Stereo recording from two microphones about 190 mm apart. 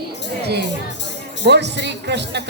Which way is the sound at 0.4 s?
60° right (ahead or behind).